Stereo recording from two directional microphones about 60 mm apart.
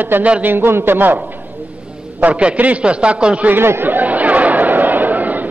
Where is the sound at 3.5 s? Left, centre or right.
Right.